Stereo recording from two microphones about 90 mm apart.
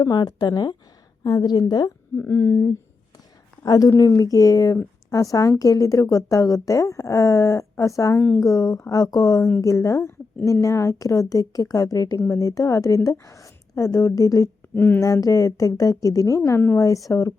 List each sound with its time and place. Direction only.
0.0 s speech: 50° left (ahead or behind)
2.2 s speech: 35° left (ahead or behind)
14.8 s a woman's voice: 20° left (ahead or behind)
15.0 s a woman's voice: 40° left (ahead or behind)